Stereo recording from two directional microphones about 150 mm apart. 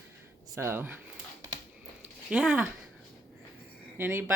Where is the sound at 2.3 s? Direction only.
10° right (ahead or behind).